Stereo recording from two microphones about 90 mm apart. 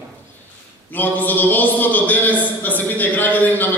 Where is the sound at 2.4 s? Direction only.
20° left (ahead or behind).